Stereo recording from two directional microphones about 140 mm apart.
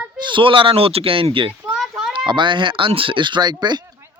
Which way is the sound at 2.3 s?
35° right (ahead or behind).